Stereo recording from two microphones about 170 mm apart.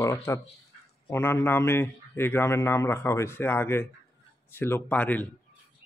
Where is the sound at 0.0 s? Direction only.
20° left (ahead or behind).